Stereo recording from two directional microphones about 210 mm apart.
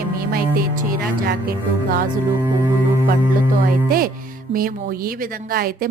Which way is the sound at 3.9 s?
45° right (ahead or behind).